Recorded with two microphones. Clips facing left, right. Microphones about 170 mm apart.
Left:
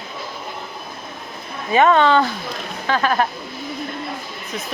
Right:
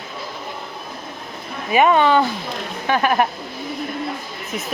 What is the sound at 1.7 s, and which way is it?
Speech, 15° right (ahead or behind).